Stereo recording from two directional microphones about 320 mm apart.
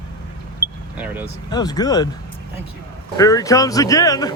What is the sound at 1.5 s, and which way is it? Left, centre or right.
Speech, centre.